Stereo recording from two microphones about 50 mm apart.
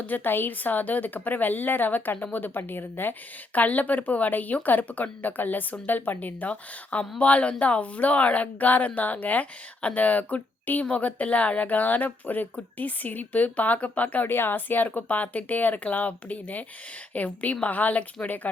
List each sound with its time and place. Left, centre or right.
0.0 s speech: left